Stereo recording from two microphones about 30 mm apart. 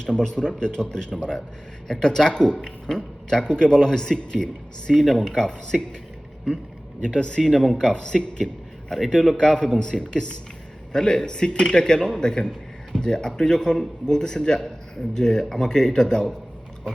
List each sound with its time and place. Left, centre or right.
0.0 s speech: left
7.0 s speech: left
7.4 s speech: centre
8.4 s speech: centre
9.6 s speech: left